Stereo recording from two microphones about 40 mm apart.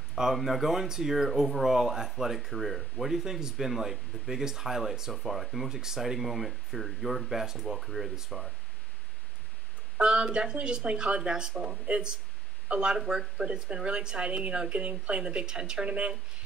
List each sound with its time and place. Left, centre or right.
0.1 s speech: centre
5.1 s speech: centre
9.9 s speech: right
13.0 s speech: centre
13.8 s speech: right